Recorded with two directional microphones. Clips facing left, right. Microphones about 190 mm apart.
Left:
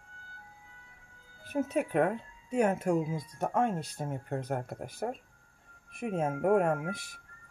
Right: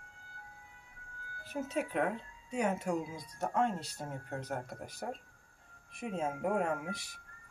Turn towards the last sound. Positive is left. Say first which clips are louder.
# left 5 dB
turn(degrees=55)  # may be behind; listen again after turning